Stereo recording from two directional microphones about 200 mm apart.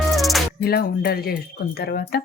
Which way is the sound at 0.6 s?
50° left (ahead or behind).